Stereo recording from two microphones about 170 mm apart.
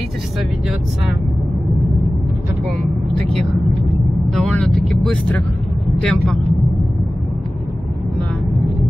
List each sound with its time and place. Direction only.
3.3 s speech: centre (ahead or behind)
5.9 s vehicle: 5° left (ahead or behind)